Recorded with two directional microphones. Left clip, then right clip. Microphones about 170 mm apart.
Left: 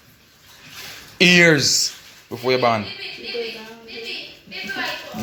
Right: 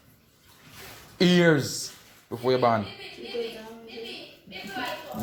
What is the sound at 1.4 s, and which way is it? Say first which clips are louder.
A man's voice: left 8 dB; centre (ahead or behind).